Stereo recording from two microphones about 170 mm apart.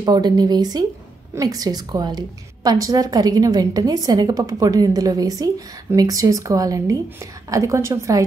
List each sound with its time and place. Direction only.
0.0 s a woman's voice: 25° right (ahead or behind)